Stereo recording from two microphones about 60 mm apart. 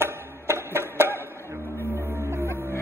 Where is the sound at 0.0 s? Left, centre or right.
Right.